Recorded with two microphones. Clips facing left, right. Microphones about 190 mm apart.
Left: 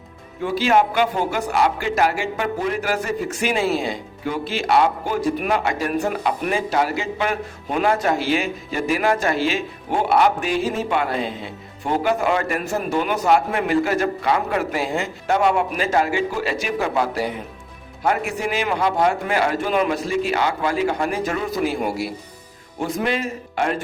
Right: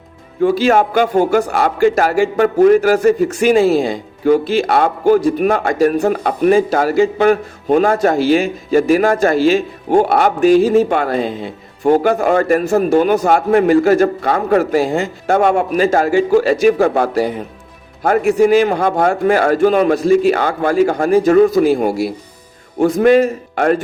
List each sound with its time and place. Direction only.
0.4 s a man's voice: 45° right (ahead or behind)